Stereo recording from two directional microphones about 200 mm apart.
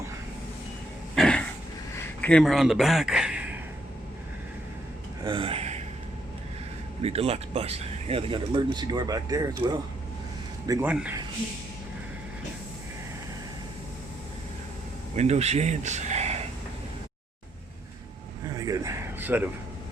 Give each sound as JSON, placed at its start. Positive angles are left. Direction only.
{"t": 1.1, "sound": "a sound", "side_deg": 5}
{"t": 2.2, "sound": "a man's voice", "side_deg": 5}
{"t": 5.2, "sound": "gasp", "side_deg": -25}
{"t": 7.0, "sound": "speech", "side_deg": -30}
{"t": 10.7, "sound": "speech", "side_deg": -10}
{"t": 15.1, "sound": "speech", "side_deg": -35}
{"t": 18.4, "sound": "a sound", "side_deg": -15}